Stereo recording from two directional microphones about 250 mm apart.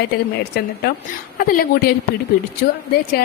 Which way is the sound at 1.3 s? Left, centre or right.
Left.